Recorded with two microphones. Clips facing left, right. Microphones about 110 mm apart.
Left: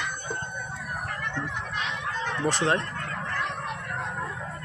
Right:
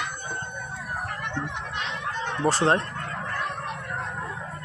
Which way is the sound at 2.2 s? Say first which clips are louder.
Right 4 dB; 30° right (ahead or behind).